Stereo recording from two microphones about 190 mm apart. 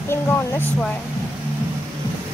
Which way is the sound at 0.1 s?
10° left (ahead or behind).